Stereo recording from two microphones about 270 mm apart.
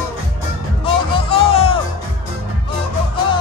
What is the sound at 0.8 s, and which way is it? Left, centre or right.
Music, left.